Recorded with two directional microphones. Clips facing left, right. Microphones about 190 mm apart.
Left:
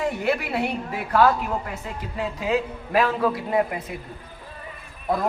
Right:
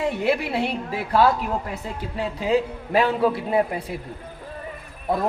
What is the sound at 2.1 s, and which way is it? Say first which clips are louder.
A man's voice: right 2 dB; 30° right (ahead or behind).